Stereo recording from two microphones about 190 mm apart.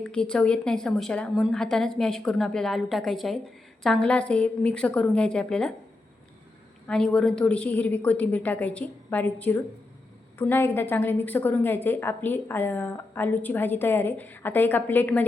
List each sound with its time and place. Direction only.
0.0 s a woman's voice: 5° left (ahead or behind)
6.8 s a woman's voice: 5° left (ahead or behind)